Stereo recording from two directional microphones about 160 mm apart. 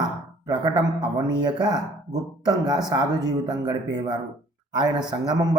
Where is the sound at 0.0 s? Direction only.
25° right (ahead or behind).